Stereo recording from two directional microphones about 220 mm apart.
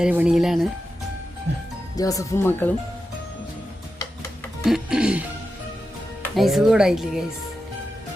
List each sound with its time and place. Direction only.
0.0 s speech: 5° right (ahead or behind)
2.0 s speech: 15° left (ahead or behind)
4.6 s speech: centre (ahead or behind)
6.2 s speech: centre (ahead or behind)